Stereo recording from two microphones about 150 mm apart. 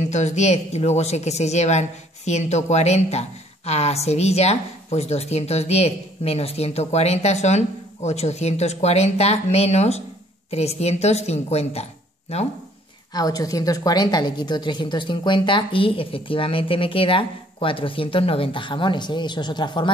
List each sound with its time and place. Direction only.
0.1 s a woman's voice: 50° left (ahead or behind)
13.1 s a woman's voice: 25° left (ahead or behind)